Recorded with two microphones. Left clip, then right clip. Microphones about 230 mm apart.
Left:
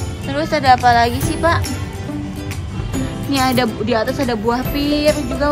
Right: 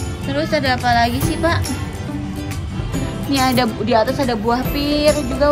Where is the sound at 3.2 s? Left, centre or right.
Centre.